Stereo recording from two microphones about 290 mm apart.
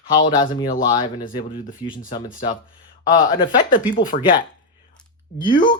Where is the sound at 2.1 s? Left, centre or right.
Left.